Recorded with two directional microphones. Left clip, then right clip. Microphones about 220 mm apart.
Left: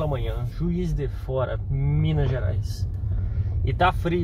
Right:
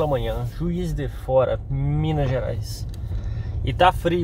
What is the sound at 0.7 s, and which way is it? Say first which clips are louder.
Speech: right 1 dB; 35° right (ahead or behind).